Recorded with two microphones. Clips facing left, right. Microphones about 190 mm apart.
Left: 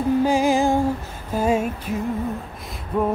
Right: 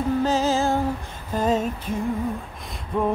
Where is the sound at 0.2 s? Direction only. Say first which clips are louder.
Left 3 dB; 10° left (ahead or behind).